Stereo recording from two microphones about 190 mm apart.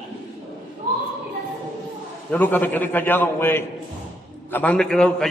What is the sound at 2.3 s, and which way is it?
A man's voice, 10° left (ahead or behind).